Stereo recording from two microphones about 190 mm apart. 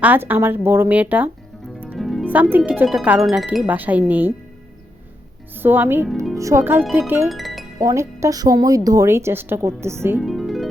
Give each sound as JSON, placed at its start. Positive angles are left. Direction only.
{"t": 0.0, "sound": "speech", "side_deg": -10}
{"t": 5.5, "sound": "speech", "side_deg": -10}
{"t": 7.3, "sound": "music", "side_deg": 0}
{"t": 7.8, "sound": "speech", "side_deg": -15}
{"t": 10.2, "sound": "music", "side_deg": 0}